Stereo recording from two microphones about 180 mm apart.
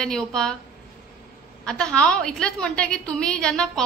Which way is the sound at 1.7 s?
5° left (ahead or behind).